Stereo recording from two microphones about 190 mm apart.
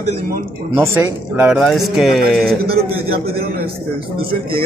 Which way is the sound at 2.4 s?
55° right (ahead or behind).